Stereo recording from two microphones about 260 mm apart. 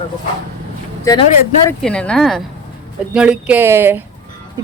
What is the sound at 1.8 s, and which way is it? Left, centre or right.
Speech, centre.